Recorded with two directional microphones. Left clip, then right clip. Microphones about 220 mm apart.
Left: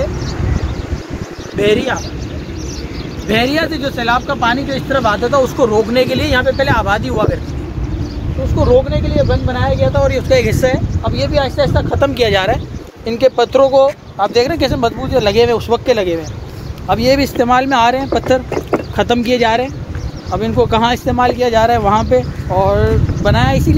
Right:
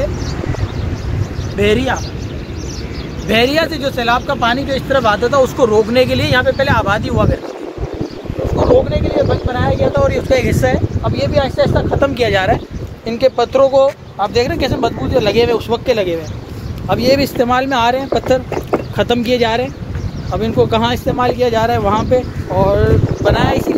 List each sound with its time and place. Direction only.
1.6 s speech: 45° right (ahead or behind)
3.3 s speech: 50° right (ahead or behind); by 5.5 s 30° right (ahead or behind)
5.6 s speech: 15° right (ahead or behind)
6.0 s speech: centre (ahead or behind); by 7.2 s 20° left (ahead or behind)
8.8 s speech: 25° left (ahead or behind)